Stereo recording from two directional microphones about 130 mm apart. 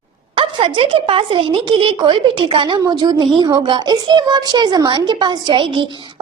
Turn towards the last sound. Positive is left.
turn(degrees=-40)  # may be behind; listen again after turning